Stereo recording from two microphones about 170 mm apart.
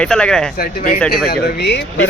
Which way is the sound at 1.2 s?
65° left (ahead or behind).